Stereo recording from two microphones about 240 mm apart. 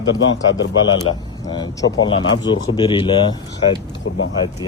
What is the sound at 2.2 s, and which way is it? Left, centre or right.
Speech, left.